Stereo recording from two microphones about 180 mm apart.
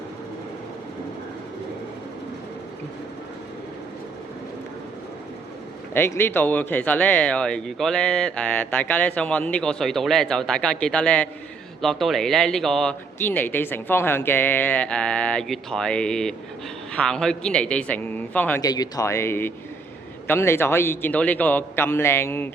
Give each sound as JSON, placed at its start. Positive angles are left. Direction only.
{"t": 5.9, "sound": "speech", "side_deg": 15}
{"t": 18.6, "sound": "speech", "side_deg": 20}